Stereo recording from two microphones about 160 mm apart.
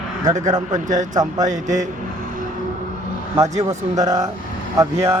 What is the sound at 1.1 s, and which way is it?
Speech, 25° right (ahead or behind).